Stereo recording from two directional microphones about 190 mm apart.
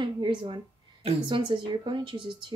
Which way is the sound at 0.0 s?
25° right (ahead or behind).